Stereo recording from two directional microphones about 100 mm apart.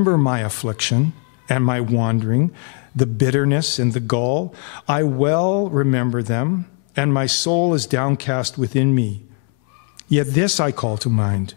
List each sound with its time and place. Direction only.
0.0 s a man's voice: 20° left (ahead or behind)
10.1 s a man's voice: 10° left (ahead or behind)